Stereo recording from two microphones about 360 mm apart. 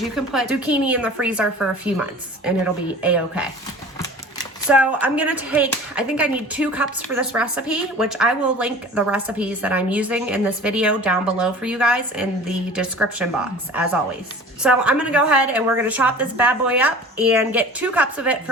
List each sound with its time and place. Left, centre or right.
0.0 s speech: centre
4.7 s speech: centre
14.6 s speech: centre